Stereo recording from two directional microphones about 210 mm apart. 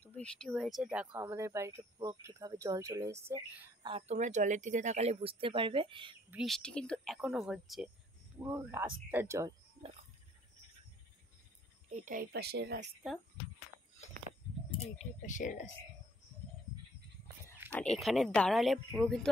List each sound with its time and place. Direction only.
0.0 s speech: 5° left (ahead or behind); by 3.7 s 10° right (ahead or behind)
3.8 s speech: 30° right (ahead or behind)
6.3 s speech: centre (ahead or behind)
8.4 s speech: 10° right (ahead or behind)
11.9 s speech: 40° right (ahead or behind); by 12.8 s 55° right (ahead or behind)
15.0 s speech: 35° left (ahead or behind)
17.7 s speech: centre (ahead or behind)